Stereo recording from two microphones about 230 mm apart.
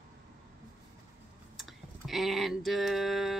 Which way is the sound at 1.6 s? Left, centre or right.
Centre.